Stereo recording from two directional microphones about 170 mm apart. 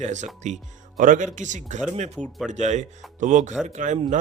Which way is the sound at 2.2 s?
5° right (ahead or behind).